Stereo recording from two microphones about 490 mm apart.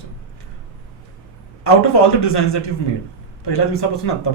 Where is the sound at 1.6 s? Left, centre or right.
Left.